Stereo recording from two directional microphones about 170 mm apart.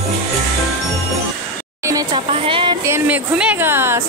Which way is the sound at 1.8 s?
20° right (ahead or behind).